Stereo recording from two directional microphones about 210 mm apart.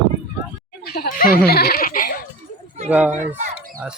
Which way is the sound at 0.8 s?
45° left (ahead or behind).